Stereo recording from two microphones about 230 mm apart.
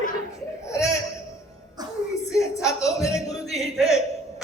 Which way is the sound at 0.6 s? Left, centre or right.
Centre.